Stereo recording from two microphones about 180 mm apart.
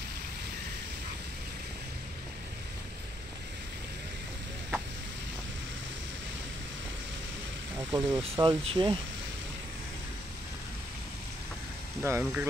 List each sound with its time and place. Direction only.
7.7 s speech: 15° right (ahead or behind)
8.2 s speech: 30° right (ahead or behind)
12.0 s speech: 10° right (ahead or behind)